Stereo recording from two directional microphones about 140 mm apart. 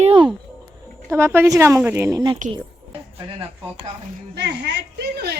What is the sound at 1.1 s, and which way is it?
Speech, 15° right (ahead or behind).